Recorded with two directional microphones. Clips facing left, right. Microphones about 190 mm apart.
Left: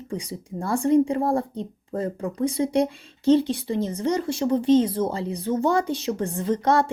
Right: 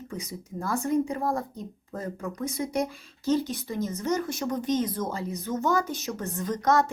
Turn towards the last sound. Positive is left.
turn(degrees=30)  # may be behind; listen again after turning